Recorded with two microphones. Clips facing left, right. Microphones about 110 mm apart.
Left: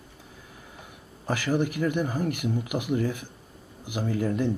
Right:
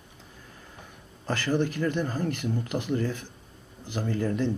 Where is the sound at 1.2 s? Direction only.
15° left (ahead or behind).